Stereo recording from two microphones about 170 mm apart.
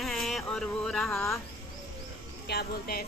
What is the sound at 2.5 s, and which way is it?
Speech, 65° left (ahead or behind).